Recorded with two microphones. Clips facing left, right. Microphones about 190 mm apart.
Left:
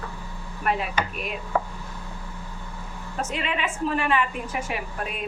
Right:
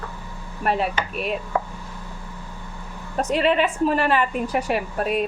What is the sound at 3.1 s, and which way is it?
A woman's voice, 35° right (ahead or behind).